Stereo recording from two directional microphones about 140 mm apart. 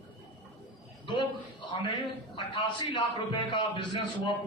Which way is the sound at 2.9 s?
35° left (ahead or behind).